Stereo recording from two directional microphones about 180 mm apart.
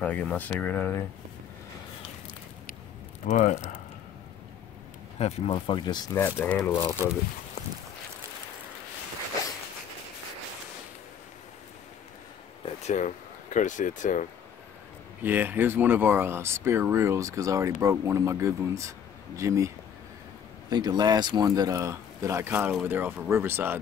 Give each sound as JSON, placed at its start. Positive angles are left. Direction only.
{"t": 0.0, "sound": "speech", "side_deg": 10}
{"t": 3.3, "sound": "speech", "side_deg": 40}
{"t": 5.2, "sound": "speech", "side_deg": 25}
{"t": 6.1, "sound": "speech", "side_deg": 10}
{"t": 6.7, "sound": "speech", "side_deg": 20}
{"t": 12.6, "sound": "speech", "side_deg": 40}
{"t": 15.2, "sound": "speech", "side_deg": -10}
{"t": 20.7, "sound": "speech", "side_deg": -25}